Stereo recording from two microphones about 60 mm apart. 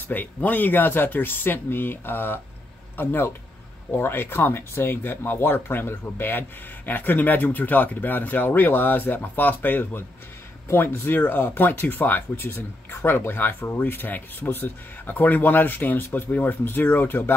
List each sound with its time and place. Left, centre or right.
0.1 s speech: left